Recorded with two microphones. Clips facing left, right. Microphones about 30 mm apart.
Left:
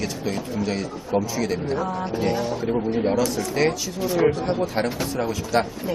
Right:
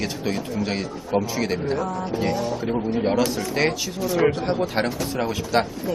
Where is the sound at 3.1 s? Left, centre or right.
Right.